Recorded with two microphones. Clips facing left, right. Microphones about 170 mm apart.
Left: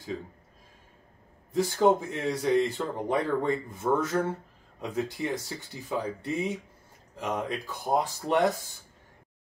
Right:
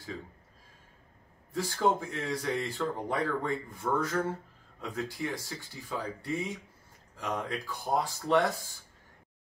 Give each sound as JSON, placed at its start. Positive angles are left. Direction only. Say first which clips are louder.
{"t": 1.5, "sound": "speech", "louder": "left 6 dB", "side_deg": 20}